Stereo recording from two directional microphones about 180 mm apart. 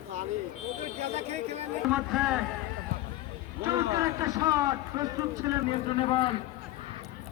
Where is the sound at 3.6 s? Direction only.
15° right (ahead or behind).